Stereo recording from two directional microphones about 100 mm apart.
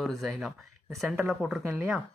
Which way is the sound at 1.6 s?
25° right (ahead or behind).